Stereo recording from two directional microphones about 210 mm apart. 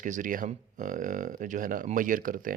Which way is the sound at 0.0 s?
40° right (ahead or behind).